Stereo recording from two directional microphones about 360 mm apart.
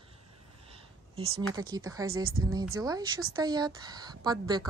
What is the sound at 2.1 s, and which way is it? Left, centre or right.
Speech, right.